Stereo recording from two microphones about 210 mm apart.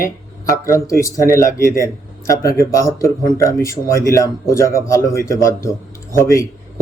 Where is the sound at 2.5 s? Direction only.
15° left (ahead or behind).